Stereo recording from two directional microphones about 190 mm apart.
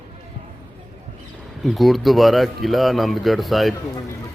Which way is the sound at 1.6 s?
Centre (ahead or behind).